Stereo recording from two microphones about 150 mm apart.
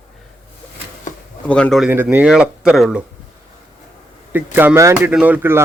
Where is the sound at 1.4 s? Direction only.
5° left (ahead or behind).